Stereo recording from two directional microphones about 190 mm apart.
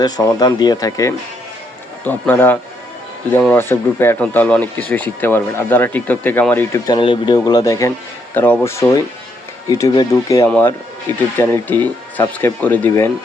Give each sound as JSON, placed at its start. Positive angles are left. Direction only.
{"t": 0.0, "sound": "speech", "side_deg": 20}